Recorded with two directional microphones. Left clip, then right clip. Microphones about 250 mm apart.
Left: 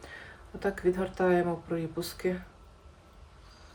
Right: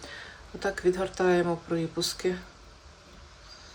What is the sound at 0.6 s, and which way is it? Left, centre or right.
Speech, centre.